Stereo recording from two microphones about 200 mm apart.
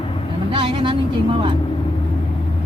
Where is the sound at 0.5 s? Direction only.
25° right (ahead or behind).